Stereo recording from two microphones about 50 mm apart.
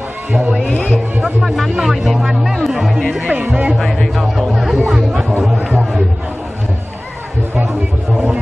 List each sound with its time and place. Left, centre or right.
1.4 s speech: centre
3.4 s speech: right
3.8 s music: centre
5.4 s chatter: centre